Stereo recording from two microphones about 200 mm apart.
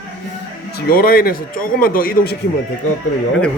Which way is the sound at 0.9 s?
45° left (ahead or behind).